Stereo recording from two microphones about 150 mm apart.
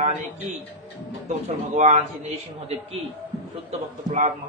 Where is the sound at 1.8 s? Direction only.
50° right (ahead or behind).